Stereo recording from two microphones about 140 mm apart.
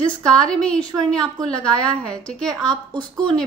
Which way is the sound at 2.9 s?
30° right (ahead or behind).